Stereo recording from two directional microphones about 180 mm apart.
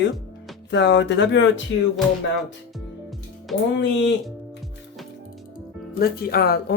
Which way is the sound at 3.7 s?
90° left.